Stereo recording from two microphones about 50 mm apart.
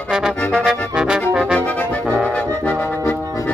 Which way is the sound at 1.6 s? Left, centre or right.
Left.